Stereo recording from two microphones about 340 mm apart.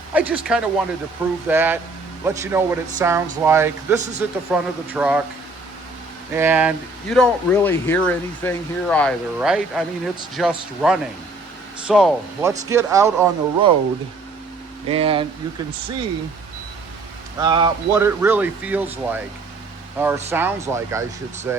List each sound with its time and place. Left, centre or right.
0.1 s speech: centre
6.3 s speech: centre
14.8 s speech: centre
17.4 s speech: centre